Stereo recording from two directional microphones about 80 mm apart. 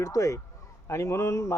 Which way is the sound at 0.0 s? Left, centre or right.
Left.